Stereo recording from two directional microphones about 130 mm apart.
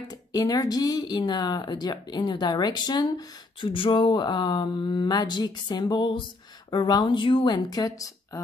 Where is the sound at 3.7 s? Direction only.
40° left (ahead or behind).